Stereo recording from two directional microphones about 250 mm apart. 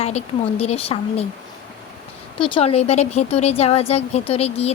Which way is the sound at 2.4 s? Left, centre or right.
Left.